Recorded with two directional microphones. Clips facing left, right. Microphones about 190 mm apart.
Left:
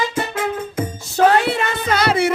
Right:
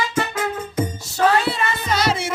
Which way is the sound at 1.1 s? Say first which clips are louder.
Left 4 dB; 60° left (ahead or behind).